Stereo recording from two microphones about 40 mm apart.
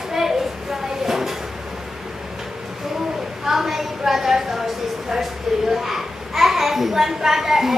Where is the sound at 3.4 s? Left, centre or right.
Centre.